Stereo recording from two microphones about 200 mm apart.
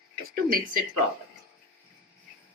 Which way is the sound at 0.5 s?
45° right (ahead or behind).